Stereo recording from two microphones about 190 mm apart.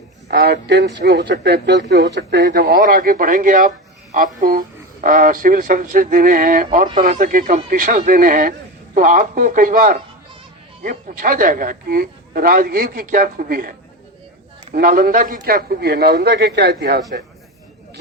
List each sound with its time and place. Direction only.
0.3 s speech: 60° right (ahead or behind)